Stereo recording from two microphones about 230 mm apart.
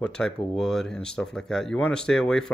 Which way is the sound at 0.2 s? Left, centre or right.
Centre.